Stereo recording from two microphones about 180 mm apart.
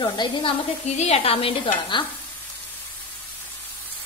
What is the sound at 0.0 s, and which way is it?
A woman's voice, 30° left (ahead or behind).